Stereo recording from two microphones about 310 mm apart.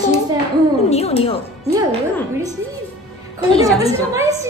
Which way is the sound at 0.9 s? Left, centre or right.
Centre.